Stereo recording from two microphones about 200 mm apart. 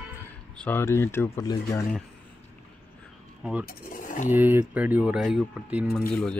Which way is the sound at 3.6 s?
40° left (ahead or behind).